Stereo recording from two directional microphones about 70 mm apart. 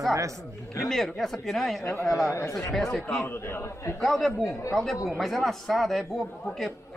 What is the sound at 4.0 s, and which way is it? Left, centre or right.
A man's voice, centre.